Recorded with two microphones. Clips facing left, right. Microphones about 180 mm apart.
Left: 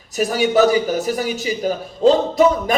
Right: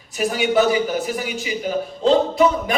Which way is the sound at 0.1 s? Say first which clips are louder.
Left 2 dB; 40° left (ahead or behind).